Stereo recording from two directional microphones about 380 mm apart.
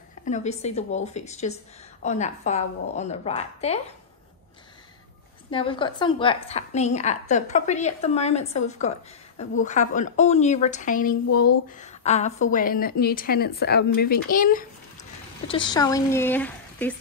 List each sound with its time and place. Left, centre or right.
0.2 s a woman's voice: centre
5.5 s a woman's voice: centre